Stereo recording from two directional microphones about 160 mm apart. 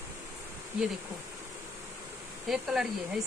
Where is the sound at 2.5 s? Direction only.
5° right (ahead or behind).